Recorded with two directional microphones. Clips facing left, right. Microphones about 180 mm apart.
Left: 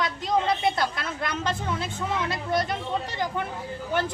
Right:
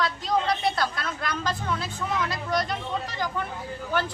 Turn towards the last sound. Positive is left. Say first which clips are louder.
# left 1 dB
turn(degrees=20)  # may be behind; listen again after turning